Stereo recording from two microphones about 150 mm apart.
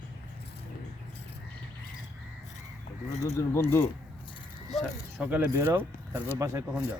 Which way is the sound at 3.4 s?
15° left (ahead or behind).